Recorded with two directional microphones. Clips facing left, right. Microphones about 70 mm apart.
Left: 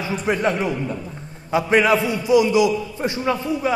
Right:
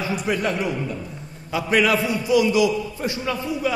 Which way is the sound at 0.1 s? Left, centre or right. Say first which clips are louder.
Left 5 dB; left.